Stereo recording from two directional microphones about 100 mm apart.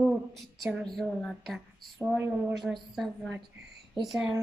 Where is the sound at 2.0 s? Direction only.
15° right (ahead or behind).